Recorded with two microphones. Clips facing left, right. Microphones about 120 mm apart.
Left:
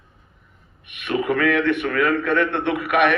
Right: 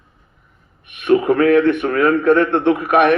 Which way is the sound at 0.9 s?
40° right (ahead or behind).